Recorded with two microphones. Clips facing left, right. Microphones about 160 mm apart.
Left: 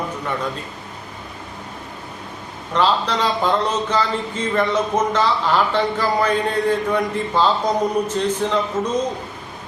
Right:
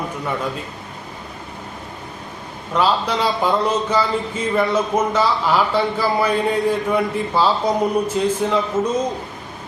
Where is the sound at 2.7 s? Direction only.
10° right (ahead or behind).